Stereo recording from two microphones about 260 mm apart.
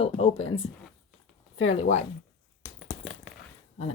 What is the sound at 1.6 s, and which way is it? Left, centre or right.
Speech, left.